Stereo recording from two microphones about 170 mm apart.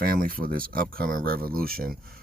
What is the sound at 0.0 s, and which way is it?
Speech, 60° right (ahead or behind).